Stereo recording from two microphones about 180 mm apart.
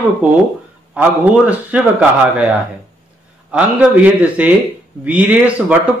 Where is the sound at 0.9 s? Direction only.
10° right (ahead or behind).